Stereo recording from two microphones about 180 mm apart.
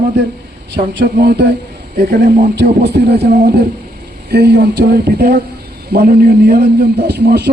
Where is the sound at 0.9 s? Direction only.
75° right (ahead or behind).